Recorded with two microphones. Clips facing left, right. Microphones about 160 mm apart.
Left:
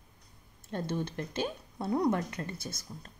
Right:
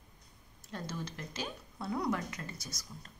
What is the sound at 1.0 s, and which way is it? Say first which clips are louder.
Speech: left 7 dB; 55° left (ahead or behind).